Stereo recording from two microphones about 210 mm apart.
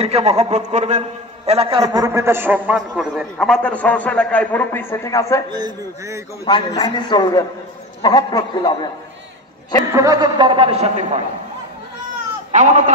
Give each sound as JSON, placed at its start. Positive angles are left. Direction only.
{"t": 0.0, "sound": "a man's voice", "side_deg": -30}
{"t": 5.5, "sound": "a man's voice", "side_deg": -15}
{"t": 6.4, "sound": "a man's voice", "side_deg": 20}
{"t": 9.9, "sound": "a man's voice", "side_deg": -15}
{"t": 12.5, "sound": "speech", "side_deg": -35}